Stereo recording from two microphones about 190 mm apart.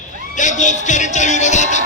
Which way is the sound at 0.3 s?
40° left (ahead or behind).